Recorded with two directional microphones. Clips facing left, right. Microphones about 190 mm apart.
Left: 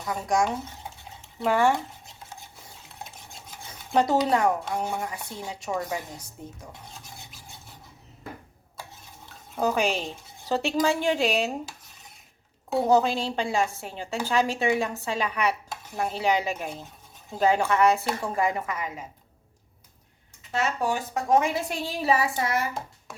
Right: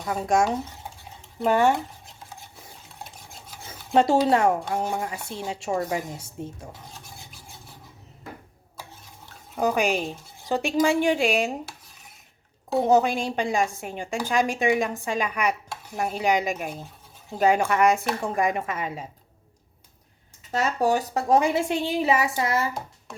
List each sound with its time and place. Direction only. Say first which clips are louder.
0.0 s speech: right 3 dB; 25° right (ahead or behind)
1.5 s speech: right 2 dB; 20° right (ahead or behind)
3.7 s dishes: right 3 dB; 25° right (ahead or behind)
4.7 s speech: right 2 dB; 25° right (ahead or behind)
9.6 s a woman's voice: right 2 dB; 15° right (ahead or behind)
12.8 s a woman's voice: right 1 dB; 15° right (ahead or behind)
20.5 s speech: right 4 dB; 40° right (ahead or behind)